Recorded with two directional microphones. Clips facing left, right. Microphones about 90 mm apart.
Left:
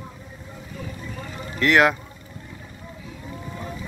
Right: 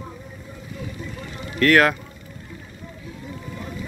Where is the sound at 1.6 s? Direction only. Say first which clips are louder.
Right 1 dB; 15° left (ahead or behind).